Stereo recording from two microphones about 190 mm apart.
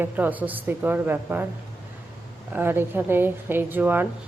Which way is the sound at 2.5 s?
10° right (ahead or behind).